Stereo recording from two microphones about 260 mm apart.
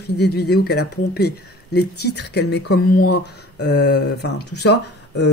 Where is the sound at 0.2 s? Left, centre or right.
Left.